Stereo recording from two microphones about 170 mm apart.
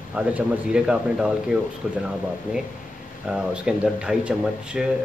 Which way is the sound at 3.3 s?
5° right (ahead or behind).